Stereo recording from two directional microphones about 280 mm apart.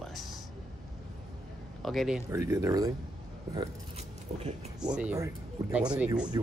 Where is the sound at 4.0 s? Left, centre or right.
Right.